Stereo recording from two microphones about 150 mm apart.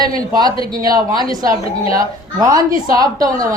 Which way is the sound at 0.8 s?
25° right (ahead or behind).